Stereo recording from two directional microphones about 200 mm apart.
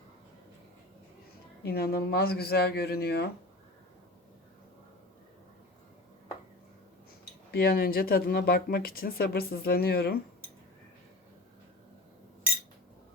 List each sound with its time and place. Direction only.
1.6 s speech: 50° left (ahead or behind)
7.5 s speech: 50° left (ahead or behind)